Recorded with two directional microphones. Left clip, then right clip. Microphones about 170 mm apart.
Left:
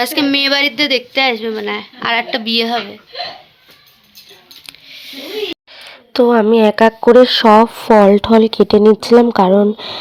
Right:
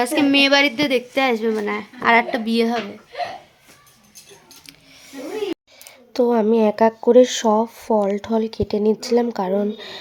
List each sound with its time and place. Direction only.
0.0 s a woman's voice: 5° right (ahead or behind)
5.0 s a sound: 10° right (ahead or behind)
5.7 s speech: 15° left (ahead or behind); by 10.0 s 30° left (ahead or behind)